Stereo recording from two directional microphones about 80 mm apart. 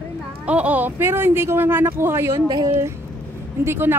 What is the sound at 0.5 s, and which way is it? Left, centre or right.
Speech, centre.